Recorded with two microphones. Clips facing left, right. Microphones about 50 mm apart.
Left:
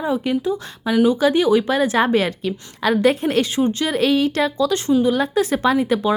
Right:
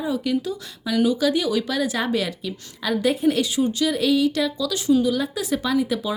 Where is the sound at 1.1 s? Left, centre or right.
Left.